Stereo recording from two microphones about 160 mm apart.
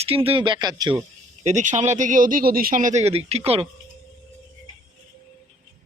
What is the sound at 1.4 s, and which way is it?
Speech, 50° right (ahead or behind).